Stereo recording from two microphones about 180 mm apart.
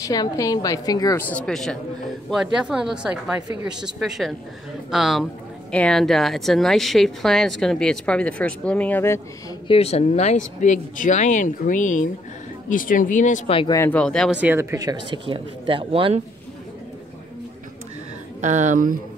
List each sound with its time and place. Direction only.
0.0 s a woman's voice: 20° left (ahead or behind)
1.3 s speech: 5° left (ahead or behind)
9.7 s speech: 35° left (ahead or behind)
13.5 s a woman's voice: 30° left (ahead or behind)
13.7 s speech: 10° left (ahead or behind)
14.3 s speech: 10° right (ahead or behind); by 16.2 s 30° right (ahead or behind)
18.4 s speech: 40° right (ahead or behind)